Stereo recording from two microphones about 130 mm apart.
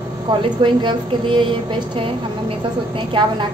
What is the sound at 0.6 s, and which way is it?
Speech, 35° right (ahead or behind).